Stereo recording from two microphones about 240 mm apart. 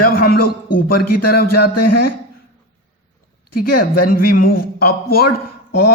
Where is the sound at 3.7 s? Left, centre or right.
Left.